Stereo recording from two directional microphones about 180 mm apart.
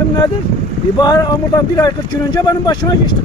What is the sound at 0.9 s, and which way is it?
Speech, 25° left (ahead or behind).